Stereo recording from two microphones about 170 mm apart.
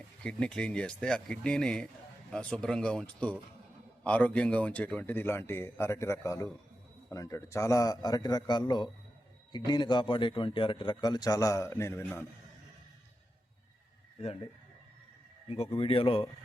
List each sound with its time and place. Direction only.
0.2 s a man's voice: 5° left (ahead or behind)
15.4 s speech: 35° left (ahead or behind)